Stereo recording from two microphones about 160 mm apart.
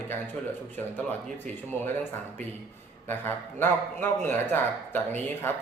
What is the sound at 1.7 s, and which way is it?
A man's voice, 15° left (ahead or behind).